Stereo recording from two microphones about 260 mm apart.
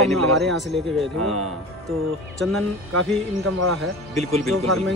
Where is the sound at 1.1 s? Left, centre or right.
Right.